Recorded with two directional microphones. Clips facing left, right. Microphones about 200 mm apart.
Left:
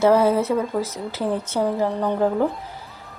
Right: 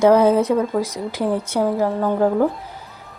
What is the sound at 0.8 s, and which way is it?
A woman's voice, 10° right (ahead or behind).